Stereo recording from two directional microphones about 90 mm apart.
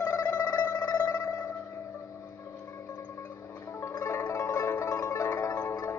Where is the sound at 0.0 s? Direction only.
35° left (ahead or behind).